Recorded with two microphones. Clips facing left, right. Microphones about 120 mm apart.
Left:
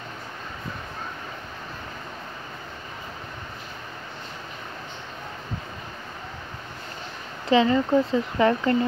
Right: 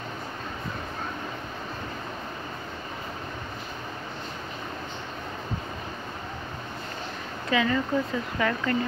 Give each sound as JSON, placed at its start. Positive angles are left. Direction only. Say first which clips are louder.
{"t": 7.4, "sound": "speech", "louder": "left 6 dB", "side_deg": 25}